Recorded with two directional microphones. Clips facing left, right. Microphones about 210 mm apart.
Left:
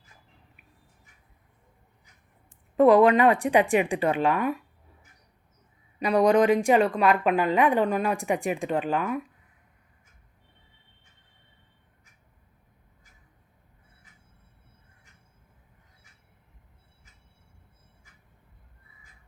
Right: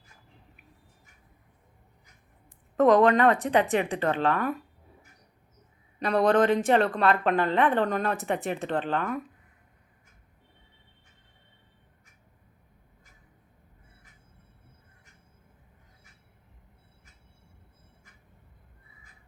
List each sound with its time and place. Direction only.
2.7 s speech: 10° left (ahead or behind)
6.0 s speech: 10° left (ahead or behind)